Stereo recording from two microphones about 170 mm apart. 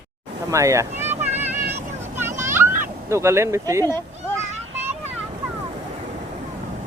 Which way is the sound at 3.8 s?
15° left (ahead or behind).